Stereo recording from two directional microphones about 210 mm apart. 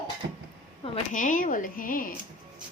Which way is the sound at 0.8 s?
30° left (ahead or behind).